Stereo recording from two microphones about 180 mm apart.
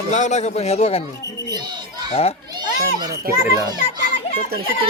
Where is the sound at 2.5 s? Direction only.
25° right (ahead or behind).